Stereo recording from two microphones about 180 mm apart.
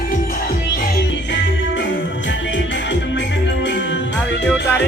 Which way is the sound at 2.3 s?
90° left.